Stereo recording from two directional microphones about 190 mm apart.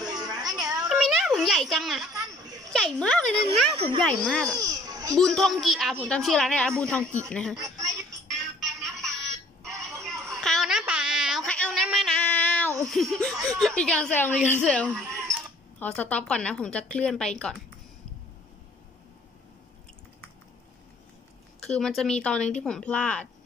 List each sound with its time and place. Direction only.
0.0 s music: 20° right (ahead or behind)
0.7 s music: 5° right (ahead or behind)
2.7 s speech: 5° left (ahead or behind)
4.6 s children playing: 20° right (ahead or behind)
5.1 s speech: 5° left (ahead or behind)
7.5 s a sound: 20° right (ahead or behind)
8.5 s music: centre (ahead or behind)
9.9 s a sound: centre (ahead or behind)
13.5 s speech: centre (ahead or behind)
21.6 s speech: 5° left (ahead or behind)